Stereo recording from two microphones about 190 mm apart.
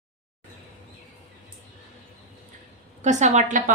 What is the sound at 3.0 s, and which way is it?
Speech, 40° right (ahead or behind).